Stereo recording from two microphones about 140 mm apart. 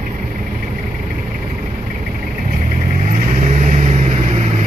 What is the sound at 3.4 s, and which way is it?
Vehicle, 65° right (ahead or behind).